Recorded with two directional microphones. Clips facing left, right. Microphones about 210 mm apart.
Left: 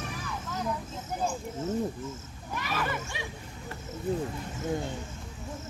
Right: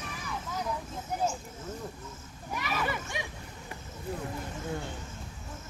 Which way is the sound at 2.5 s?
10° right (ahead or behind).